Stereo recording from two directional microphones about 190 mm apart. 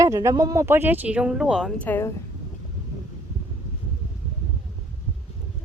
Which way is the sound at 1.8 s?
10° left (ahead or behind).